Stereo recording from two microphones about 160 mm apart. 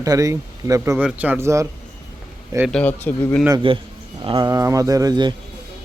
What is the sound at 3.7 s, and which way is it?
Speech, 35° right (ahead or behind).